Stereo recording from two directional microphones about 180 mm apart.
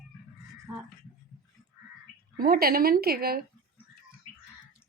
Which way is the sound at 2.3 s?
55° right (ahead or behind).